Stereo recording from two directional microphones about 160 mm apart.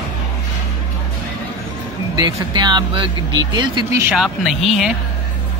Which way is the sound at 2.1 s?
25° right (ahead or behind).